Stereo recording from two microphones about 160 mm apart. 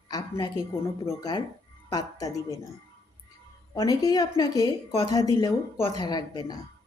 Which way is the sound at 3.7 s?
20° left (ahead or behind).